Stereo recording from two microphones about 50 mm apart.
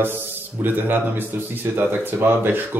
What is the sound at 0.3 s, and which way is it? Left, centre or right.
Speech, right.